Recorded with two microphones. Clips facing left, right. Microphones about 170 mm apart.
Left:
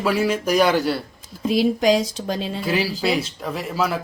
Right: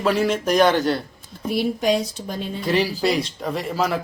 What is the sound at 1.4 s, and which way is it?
Speech, 90° left.